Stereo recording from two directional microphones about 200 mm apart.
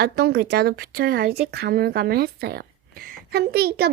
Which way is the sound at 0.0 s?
55° right (ahead or behind).